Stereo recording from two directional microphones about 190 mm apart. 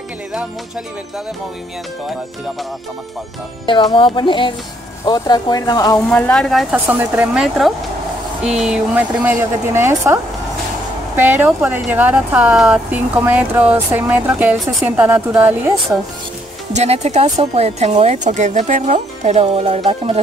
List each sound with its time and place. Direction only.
3.6 s speech: 25° left (ahead or behind)
6.1 s speech: 5° left (ahead or behind); by 15.7 s 10° right (ahead or behind)
16.7 s speech: 35° right (ahead or behind)